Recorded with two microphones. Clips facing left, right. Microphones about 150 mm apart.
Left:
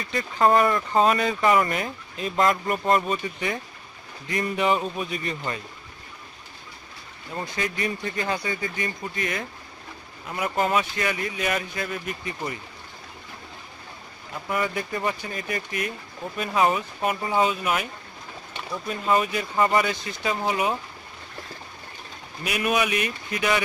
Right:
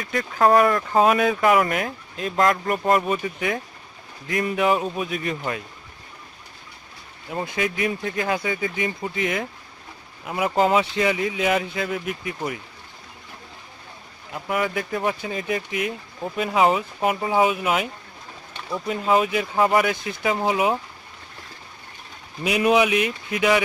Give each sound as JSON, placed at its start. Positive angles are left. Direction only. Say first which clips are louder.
{"t": 0.0, "sound": "speech", "louder": "right 2 dB", "side_deg": 0}
{"t": 7.5, "sound": "speech", "louder": "right 4 dB", "side_deg": -5}
{"t": 11.7, "sound": "speech", "louder": "right 4 dB", "side_deg": -90}
{"t": 14.3, "sound": "speech", "louder": "right 2 dB", "side_deg": -5}
{"t": 16.3, "sound": "speech", "louder": "right 3 dB", "side_deg": -15}
{"t": 18.9, "sound": "speech", "louder": "right 3 dB", "side_deg": -15}
{"t": 22.6, "sound": "speech", "louder": "right 6 dB", "side_deg": -20}